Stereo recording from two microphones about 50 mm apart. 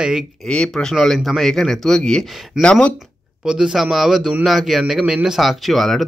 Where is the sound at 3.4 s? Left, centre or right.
Centre.